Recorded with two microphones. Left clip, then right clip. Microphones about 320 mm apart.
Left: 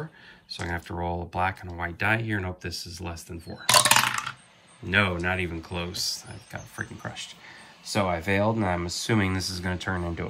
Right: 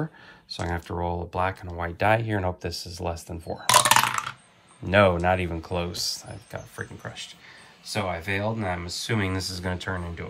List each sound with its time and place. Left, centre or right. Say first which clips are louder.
0.6 s speech: right 2 dB; centre